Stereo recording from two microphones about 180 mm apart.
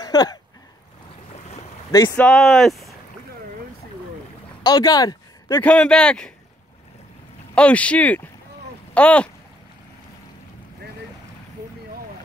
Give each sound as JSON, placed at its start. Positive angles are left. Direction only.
{"t": 0.0, "sound": "a sound", "side_deg": 20}
{"t": 1.9, "sound": "speech", "side_deg": 20}
{"t": 2.1, "sound": "speech", "side_deg": 5}
{"t": 4.6, "sound": "speech", "side_deg": 20}
{"t": 5.6, "sound": "speech", "side_deg": 5}
{"t": 7.5, "sound": "speech", "side_deg": 5}